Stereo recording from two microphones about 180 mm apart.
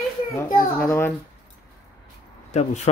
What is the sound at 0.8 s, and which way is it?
Speech, 10° left (ahead or behind).